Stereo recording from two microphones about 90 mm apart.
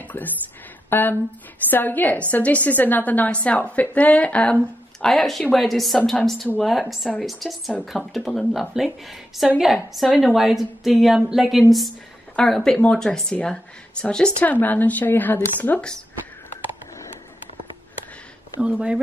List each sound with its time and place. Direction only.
0.2 s a woman's voice: 20° left (ahead or behind)
5.0 s a woman's voice: centre (ahead or behind)
12.4 s speech: 5° left (ahead or behind)
18.6 s speech: 10° right (ahead or behind)